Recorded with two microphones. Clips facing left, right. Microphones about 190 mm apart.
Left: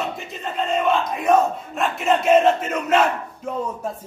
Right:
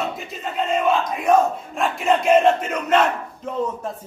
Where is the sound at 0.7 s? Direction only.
Centre (ahead or behind).